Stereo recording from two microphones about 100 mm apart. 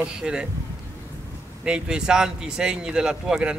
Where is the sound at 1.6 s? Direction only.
10° right (ahead or behind).